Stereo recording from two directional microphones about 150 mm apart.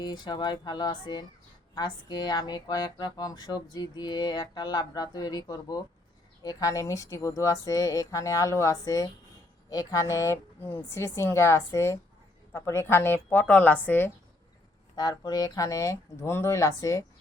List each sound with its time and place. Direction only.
0.0 s a woman's voice: 30° left (ahead or behind); by 14.1 s 10° left (ahead or behind)
14.9 s speech: 25° left (ahead or behind)